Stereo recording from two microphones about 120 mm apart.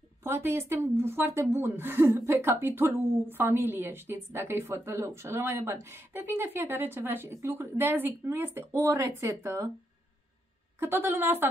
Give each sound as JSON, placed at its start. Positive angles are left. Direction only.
{"t": 0.2, "sound": "a woman's voice", "side_deg": -20}
{"t": 10.8, "sound": "a woman's voice", "side_deg": -20}